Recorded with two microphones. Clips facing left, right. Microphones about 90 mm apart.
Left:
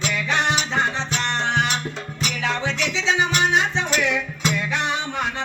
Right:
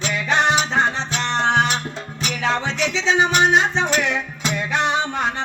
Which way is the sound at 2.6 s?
35° right (ahead or behind).